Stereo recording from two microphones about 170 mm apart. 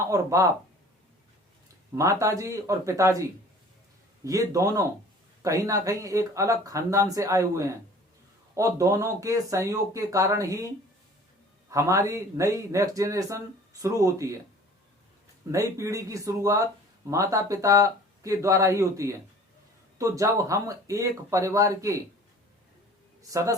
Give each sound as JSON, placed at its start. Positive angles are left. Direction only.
{"t": 0.0, "sound": "speech", "side_deg": -20}
{"t": 2.0, "sound": "speech", "side_deg": -20}
{"t": 11.7, "sound": "speech", "side_deg": -20}
{"t": 15.5, "sound": "speech", "side_deg": -20}